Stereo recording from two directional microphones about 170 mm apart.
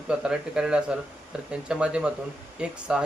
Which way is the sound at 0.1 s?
5° right (ahead or behind).